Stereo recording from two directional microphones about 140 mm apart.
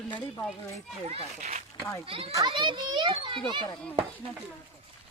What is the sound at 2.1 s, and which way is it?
A child's voice, 40° right (ahead or behind).